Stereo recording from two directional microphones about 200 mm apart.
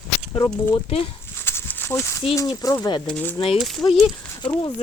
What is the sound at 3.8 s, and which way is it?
Speech, 20° left (ahead or behind).